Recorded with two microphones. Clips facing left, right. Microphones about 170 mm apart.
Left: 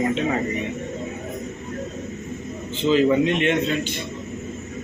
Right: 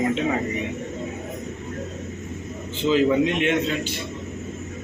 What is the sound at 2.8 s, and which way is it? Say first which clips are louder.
A man's voice: left 1 dB; 5° right (ahead or behind).